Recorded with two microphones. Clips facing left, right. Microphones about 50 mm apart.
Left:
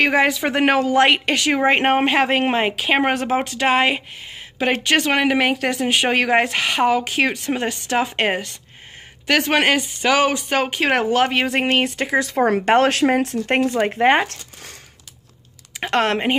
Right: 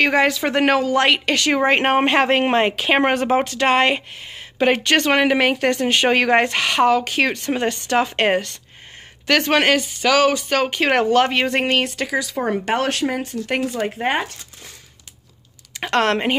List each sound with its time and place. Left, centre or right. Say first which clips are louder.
0.0 s speech: even; centre
9.8 s speech: right 1 dB; left
10.7 s speech: right 3 dB; centre
11.8 s speech: left 2 dB; centre
12.2 s speech: left 7 dB; left
12.4 s speech: left 6 dB; left
13.7 s speech: left 6 dB; left
14.2 s speech: left 4 dB; left
15.8 s a woman's voice: right 1 dB; centre